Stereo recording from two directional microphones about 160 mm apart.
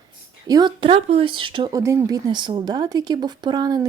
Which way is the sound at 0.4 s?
25° right (ahead or behind).